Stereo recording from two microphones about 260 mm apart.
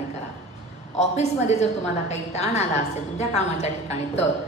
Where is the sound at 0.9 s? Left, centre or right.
Left.